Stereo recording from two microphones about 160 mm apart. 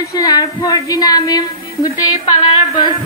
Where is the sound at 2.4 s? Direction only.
30° left (ahead or behind).